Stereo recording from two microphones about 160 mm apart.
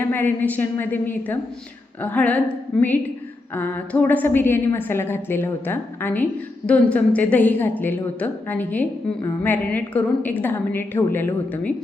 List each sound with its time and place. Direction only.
0.0 s a woman's voice: 10° left (ahead or behind)